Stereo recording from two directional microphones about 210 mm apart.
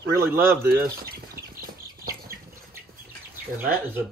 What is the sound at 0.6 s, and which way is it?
Speech, 50° right (ahead or behind).